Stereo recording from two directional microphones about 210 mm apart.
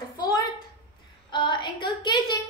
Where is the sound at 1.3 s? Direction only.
20° left (ahead or behind).